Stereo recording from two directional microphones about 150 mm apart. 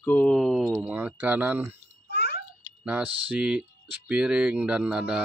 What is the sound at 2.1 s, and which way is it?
Babbling, 90° left.